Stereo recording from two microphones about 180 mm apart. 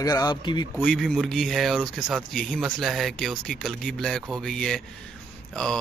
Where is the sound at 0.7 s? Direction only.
5° left (ahead or behind).